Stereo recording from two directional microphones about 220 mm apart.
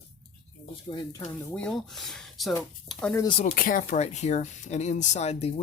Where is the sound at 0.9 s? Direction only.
15° left (ahead or behind).